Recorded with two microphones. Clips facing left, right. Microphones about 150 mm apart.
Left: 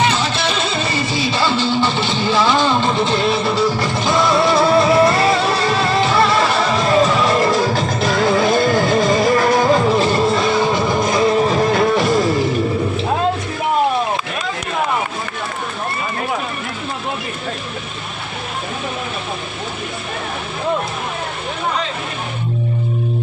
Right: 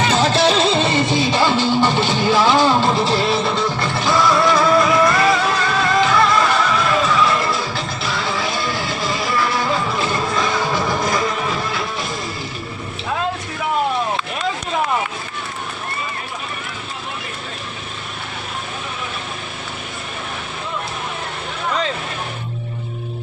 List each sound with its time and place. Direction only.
0.1 s music: 40° right (ahead or behind); by 11.9 s 50° left (ahead or behind)
11.9 s music: 85° left